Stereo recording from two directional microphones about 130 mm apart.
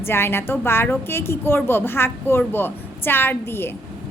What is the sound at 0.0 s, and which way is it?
A woman's voice, 15° left (ahead or behind).